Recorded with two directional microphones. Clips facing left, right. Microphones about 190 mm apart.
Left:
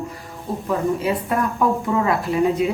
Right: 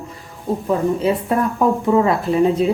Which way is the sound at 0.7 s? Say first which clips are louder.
Right 3 dB; 25° right (ahead or behind).